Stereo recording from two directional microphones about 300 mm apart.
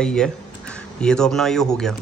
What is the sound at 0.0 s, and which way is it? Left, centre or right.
Speech, centre.